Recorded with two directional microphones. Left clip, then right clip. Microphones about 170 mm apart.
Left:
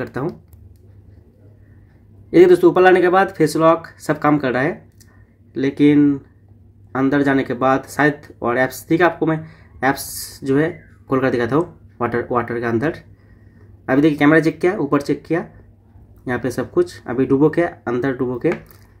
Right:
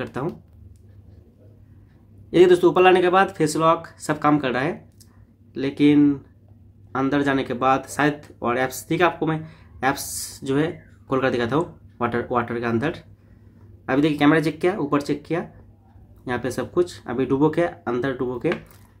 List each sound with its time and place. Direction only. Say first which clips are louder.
0.0 s speech: left 4 dB; 20° left (ahead or behind)
2.3 s speech: left 4 dB; 25° left (ahead or behind)